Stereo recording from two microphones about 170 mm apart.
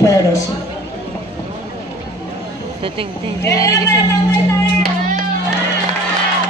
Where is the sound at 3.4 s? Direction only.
20° left (ahead or behind).